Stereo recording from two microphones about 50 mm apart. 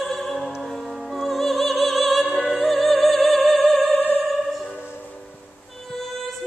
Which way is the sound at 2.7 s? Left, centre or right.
Centre.